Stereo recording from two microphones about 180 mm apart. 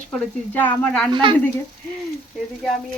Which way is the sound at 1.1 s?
30° right (ahead or behind).